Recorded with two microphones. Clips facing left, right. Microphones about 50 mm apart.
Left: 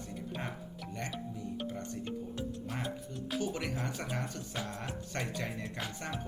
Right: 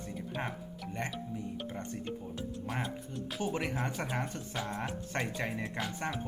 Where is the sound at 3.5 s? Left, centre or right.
Right.